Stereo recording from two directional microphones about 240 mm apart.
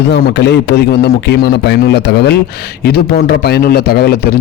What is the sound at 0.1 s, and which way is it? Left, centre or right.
A man's voice, left.